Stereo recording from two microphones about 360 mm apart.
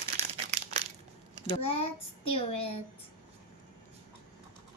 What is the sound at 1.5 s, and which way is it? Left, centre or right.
A child's voice, centre.